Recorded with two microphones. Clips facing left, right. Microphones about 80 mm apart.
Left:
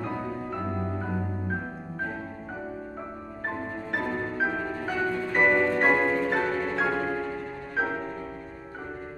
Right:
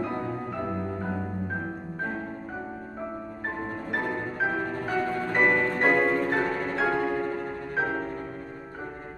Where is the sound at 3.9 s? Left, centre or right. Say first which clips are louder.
Left 1 dB; centre.